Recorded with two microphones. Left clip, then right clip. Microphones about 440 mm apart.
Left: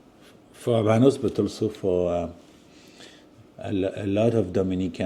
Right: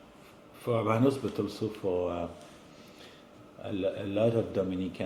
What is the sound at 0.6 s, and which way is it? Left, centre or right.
Speech, left.